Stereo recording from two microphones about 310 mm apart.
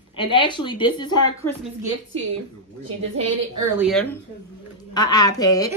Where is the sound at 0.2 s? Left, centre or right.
Centre.